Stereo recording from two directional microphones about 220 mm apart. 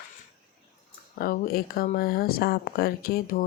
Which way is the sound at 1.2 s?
45° left (ahead or behind).